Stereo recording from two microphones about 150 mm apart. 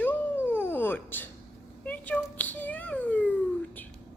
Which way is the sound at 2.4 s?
10° left (ahead or behind).